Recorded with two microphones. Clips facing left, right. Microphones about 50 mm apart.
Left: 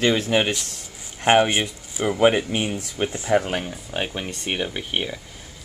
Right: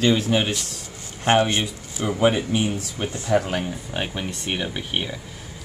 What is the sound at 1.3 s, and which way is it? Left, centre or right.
Speech, centre.